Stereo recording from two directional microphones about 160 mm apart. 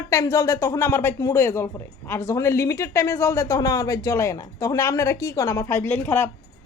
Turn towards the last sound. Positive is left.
turn(degrees=15)  # may be behind; listen again after turning